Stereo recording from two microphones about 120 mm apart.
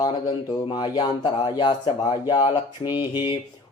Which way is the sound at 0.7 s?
35° left (ahead or behind).